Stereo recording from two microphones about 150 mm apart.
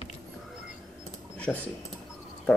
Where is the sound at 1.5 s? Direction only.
5° left (ahead or behind).